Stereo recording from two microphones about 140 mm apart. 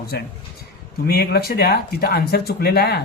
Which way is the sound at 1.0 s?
90° left.